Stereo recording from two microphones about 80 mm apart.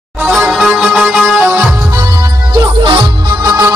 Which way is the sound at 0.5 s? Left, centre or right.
Centre.